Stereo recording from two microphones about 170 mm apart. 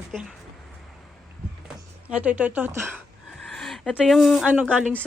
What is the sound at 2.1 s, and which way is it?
Speech, 5° right (ahead or behind).